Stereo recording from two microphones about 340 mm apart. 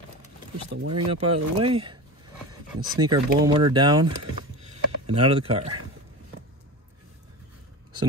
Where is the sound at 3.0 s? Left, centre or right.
Centre.